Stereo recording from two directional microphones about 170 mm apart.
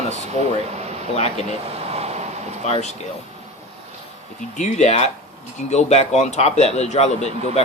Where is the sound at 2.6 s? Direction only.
40° left (ahead or behind).